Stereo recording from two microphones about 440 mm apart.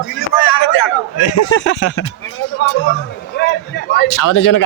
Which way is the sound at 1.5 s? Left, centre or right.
Left.